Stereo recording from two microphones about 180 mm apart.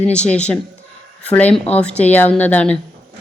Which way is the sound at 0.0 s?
5° left (ahead or behind).